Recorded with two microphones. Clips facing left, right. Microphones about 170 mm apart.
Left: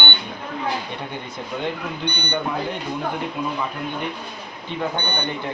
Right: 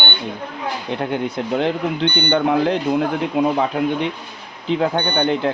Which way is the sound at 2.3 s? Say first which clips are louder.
Right 9 dB; 90° right.